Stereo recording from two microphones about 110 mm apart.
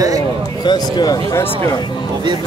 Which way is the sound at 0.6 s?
40° left (ahead or behind).